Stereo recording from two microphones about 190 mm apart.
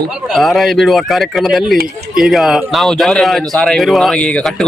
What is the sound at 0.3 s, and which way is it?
Speech, centre (ahead or behind).